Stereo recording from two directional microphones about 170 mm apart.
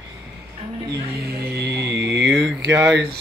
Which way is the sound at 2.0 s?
90° right.